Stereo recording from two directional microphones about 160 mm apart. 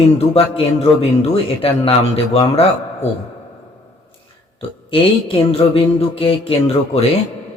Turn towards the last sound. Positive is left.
turn(degrees=35)  # may be behind; listen again after turning